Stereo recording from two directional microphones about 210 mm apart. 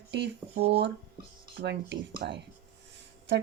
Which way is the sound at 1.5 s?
55° right (ahead or behind).